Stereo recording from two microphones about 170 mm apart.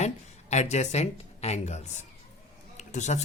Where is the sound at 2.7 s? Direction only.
45° left (ahead or behind).